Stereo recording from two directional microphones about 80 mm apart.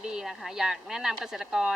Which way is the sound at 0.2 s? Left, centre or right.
Centre.